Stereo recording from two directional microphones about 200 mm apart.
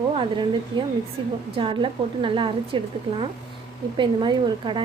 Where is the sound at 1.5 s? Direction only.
25° right (ahead or behind).